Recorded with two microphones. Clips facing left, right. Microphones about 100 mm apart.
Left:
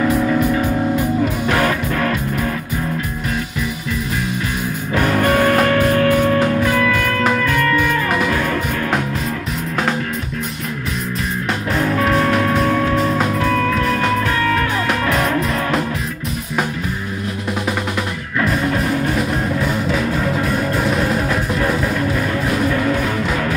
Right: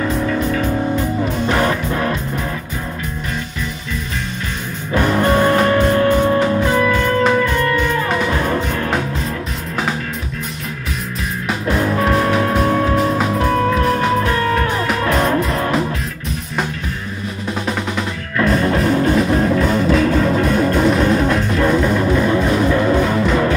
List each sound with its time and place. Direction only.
0.0 s music: 5° left (ahead or behind)
1.6 s music: 20° right (ahead or behind)
5.1 s music: 20° right (ahead or behind)
11.9 s music: 30° right (ahead or behind)
18.4 s music: centre (ahead or behind)